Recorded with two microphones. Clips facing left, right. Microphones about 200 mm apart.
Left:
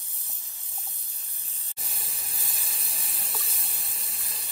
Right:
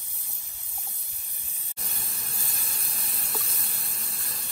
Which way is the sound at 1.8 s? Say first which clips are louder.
Right 2 dB; centre (ahead or behind).